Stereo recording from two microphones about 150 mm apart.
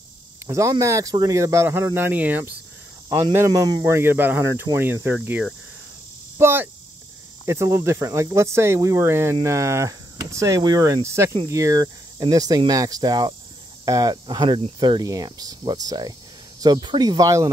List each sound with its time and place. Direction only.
0.5 s speech: 20° right (ahead or behind)
3.1 s speech: 25° right (ahead or behind)